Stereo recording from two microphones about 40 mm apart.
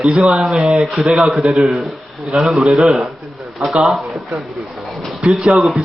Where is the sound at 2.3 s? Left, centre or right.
Centre.